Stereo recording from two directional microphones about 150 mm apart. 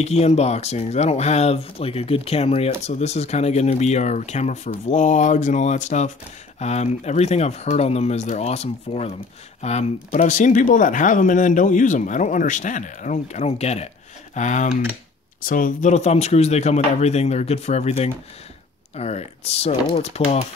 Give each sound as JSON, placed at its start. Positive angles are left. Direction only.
{"t": 0.0, "sound": "speech", "side_deg": 45}
{"t": 15.4, "sound": "speech", "side_deg": 65}